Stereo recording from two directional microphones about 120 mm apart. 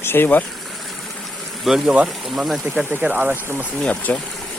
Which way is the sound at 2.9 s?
15° right (ahead or behind).